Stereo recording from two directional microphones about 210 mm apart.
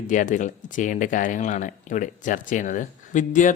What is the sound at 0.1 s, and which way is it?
Speech, 35° left (ahead or behind).